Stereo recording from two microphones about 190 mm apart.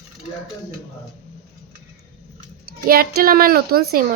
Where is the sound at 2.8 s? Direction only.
50° right (ahead or behind).